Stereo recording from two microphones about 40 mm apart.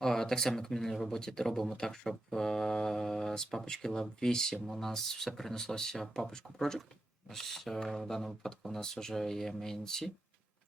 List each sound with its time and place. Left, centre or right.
0.0 s speech: centre
4.5 s speech: centre
4.8 s speech: centre